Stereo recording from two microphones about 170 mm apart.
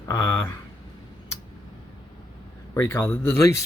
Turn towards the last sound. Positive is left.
turn(degrees=15)  # may be behind; listen again after turning